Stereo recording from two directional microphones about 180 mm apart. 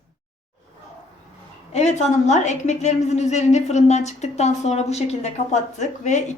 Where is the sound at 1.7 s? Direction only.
40° left (ahead or behind).